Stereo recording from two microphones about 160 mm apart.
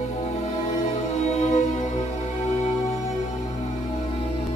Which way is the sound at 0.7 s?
40° left (ahead or behind).